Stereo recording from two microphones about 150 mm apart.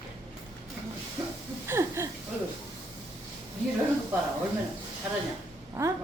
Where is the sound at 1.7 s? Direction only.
20° right (ahead or behind).